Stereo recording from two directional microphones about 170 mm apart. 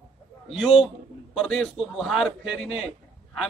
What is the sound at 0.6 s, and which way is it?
A man's voice, centre (ahead or behind).